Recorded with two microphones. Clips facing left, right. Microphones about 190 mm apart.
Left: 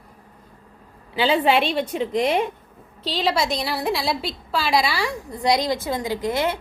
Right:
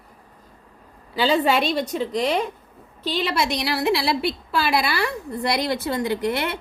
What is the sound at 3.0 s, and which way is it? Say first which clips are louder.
A woman's voice: left 1 dB; 50° right (ahead or behind).